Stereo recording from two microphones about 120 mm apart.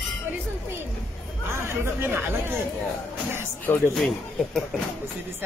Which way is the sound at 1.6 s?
20° right (ahead or behind).